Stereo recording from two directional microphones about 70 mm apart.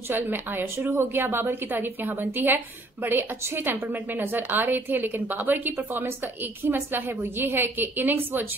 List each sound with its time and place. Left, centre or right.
0.1 s a woman's voice: right